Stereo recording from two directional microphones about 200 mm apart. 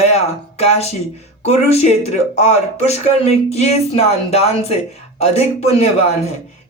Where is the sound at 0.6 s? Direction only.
30° left (ahead or behind).